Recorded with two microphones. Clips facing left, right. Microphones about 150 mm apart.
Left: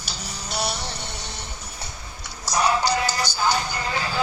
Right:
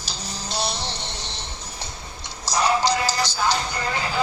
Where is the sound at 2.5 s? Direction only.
90° right.